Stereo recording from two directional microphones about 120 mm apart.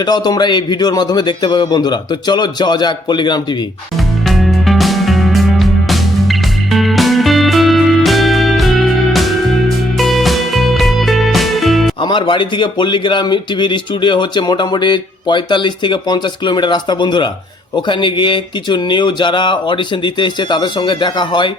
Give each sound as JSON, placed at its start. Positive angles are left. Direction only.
{"t": 0.0, "sound": "speech", "side_deg": 35}
{"t": 4.3, "sound": "music", "side_deg": 0}
{"t": 12.0, "sound": "speech", "side_deg": 40}